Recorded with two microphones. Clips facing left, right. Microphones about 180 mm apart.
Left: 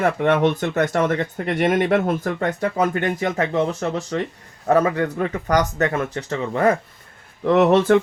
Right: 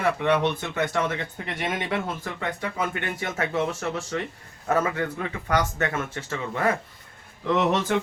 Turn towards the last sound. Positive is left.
turn(degrees=50)  # may be behind; listen again after turning